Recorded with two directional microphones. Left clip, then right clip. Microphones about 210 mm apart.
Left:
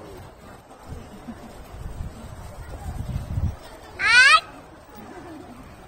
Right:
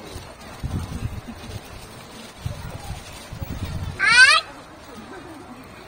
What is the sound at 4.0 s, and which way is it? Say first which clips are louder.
Cat: right 1 dB; 15° left (ahead or behind).